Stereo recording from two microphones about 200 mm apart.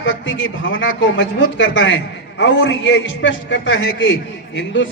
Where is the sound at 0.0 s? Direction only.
70° left (ahead or behind).